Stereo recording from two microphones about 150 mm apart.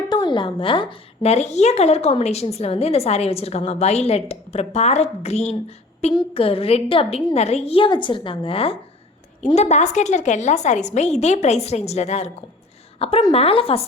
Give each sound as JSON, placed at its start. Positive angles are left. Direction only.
{"t": 0.1, "sound": "a woman's voice", "side_deg": 30}
{"t": 9.6, "sound": "a woman's voice", "side_deg": 50}